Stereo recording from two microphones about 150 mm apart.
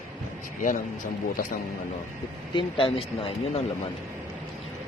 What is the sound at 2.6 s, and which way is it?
Speech, 35° left (ahead or behind).